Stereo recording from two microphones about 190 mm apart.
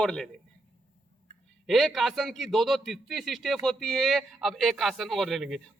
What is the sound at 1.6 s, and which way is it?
A man's voice, centre (ahead or behind).